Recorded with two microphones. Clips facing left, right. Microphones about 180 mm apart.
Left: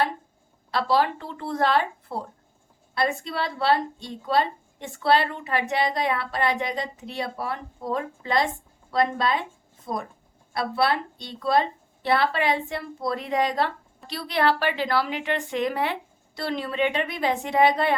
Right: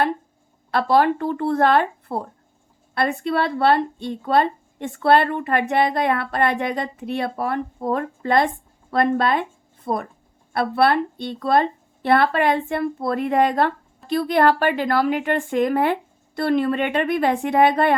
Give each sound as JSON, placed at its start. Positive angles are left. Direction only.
{"t": 0.7, "sound": "a woman's voice", "side_deg": -55}